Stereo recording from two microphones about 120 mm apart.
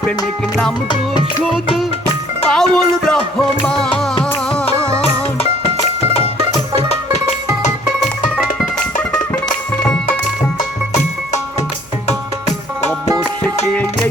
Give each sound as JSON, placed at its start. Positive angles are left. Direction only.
{"t": 2.5, "sound": "speech", "side_deg": 5}
{"t": 4.9, "sound": "music", "side_deg": 55}
{"t": 6.7, "sound": "music", "side_deg": 60}
{"t": 7.6, "sound": "music", "side_deg": 90}
{"t": 9.8, "sound": "music", "side_deg": 5}